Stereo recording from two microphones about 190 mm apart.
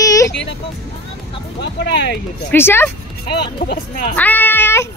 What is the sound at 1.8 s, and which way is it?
Speech, 65° left (ahead or behind).